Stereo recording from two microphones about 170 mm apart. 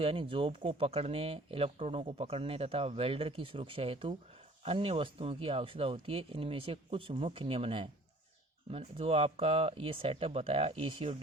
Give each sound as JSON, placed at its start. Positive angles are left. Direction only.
{"t": 0.0, "sound": "speech", "side_deg": -30}